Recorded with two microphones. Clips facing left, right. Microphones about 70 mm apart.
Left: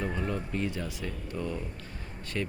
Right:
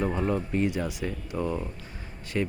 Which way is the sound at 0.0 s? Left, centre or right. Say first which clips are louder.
Right 6 dB; right.